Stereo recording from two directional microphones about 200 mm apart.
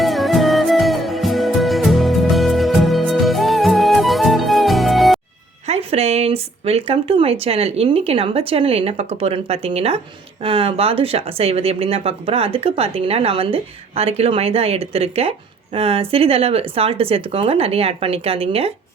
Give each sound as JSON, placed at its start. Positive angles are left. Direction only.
{"t": 0.0, "sound": "music", "side_deg": 0}
{"t": 5.6, "sound": "speech", "side_deg": -30}